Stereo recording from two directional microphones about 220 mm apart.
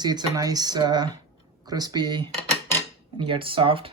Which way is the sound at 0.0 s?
20° right (ahead or behind).